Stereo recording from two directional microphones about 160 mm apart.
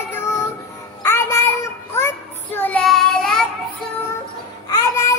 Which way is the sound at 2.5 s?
10° left (ahead or behind).